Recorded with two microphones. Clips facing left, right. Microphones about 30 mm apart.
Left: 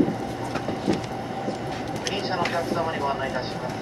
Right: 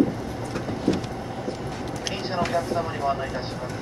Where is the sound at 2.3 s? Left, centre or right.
Centre.